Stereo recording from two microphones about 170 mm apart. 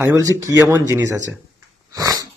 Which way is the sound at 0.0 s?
20° right (ahead or behind).